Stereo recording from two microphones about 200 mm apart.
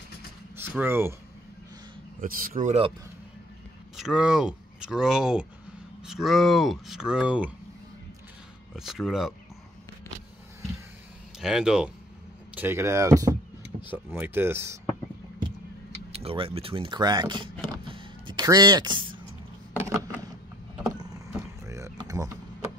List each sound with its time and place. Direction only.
0.6 s speech: 10° right (ahead or behind)
2.1 s speech: 45° right (ahead or behind)
3.9 s speech: centre (ahead or behind)
8.7 s speech: centre (ahead or behind)
11.3 s speech: 5° right (ahead or behind)
16.1 s speech: 30° right (ahead or behind)
17.8 s music: 25° right (ahead or behind)
19.7 s a sound: 10° right (ahead or behind)
21.0 s wild animals: 15° right (ahead or behind)